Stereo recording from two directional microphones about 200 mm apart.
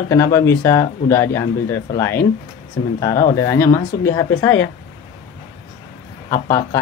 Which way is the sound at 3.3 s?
15° left (ahead or behind).